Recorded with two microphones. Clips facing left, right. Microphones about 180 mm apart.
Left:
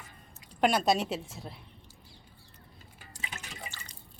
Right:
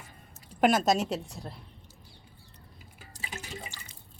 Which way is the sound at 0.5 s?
5° right (ahead or behind).